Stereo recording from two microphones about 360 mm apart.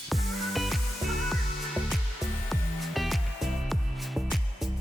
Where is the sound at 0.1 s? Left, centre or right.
Centre.